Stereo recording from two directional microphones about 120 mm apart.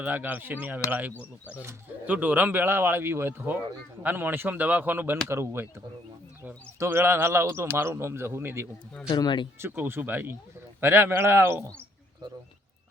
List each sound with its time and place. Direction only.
0.0 s speech: 15° right (ahead or behind)
9.0 s speech: 35° left (ahead or behind)
9.6 s speech: 20° right (ahead or behind)